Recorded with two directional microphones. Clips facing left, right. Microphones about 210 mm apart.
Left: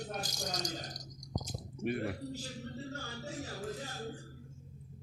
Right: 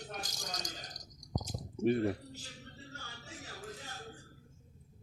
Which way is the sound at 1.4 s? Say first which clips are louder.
Right 8 dB; 30° right (ahead or behind).